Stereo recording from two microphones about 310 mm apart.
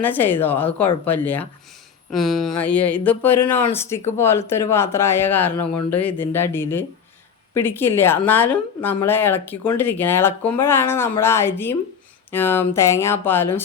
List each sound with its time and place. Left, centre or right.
0.0 s a woman's voice: centre
5.5 s speech: left
6.0 s a woman's voice: centre